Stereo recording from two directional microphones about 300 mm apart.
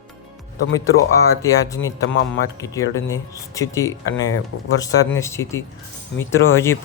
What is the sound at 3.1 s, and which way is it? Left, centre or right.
Speech, centre.